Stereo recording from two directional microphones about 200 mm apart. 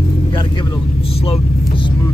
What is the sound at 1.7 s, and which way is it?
Vehicle, 25° left (ahead or behind).